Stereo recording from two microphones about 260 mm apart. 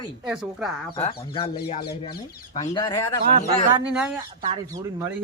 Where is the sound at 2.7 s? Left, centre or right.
Centre.